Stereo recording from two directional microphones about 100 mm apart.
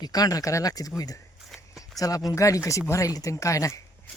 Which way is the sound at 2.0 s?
35° left (ahead or behind).